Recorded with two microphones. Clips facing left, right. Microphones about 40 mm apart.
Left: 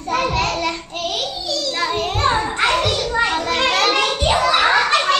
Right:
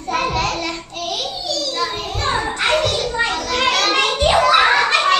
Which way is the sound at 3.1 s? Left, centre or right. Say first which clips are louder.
Left 2 dB; left.